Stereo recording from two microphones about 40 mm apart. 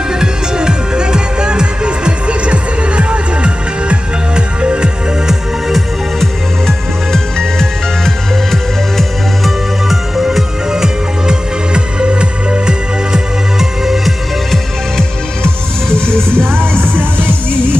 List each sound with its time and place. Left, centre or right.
0.2 s music: centre
5.7 s music: centre
6.6 s music: centre
10.7 s music: centre
16.2 s music: right